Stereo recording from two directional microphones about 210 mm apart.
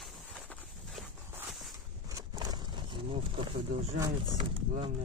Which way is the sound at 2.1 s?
20° right (ahead or behind).